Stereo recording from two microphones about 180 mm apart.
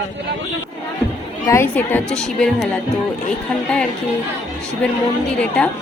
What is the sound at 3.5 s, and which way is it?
Speech, 5° left (ahead or behind).